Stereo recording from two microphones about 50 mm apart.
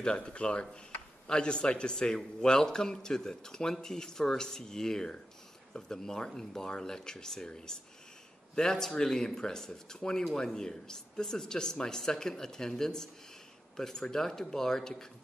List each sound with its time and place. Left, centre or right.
0.0 s a man's voice: centre